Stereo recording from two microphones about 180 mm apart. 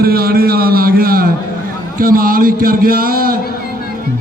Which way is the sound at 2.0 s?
50° right (ahead or behind).